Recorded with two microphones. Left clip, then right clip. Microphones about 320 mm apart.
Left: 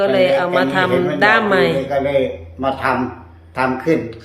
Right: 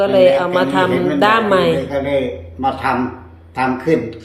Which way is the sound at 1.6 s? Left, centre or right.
Centre.